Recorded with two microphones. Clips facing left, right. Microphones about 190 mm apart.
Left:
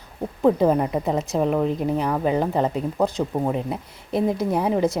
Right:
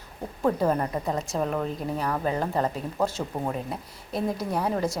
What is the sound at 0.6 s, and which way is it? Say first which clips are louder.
Speech: left 5 dB; 10° left (ahead or behind).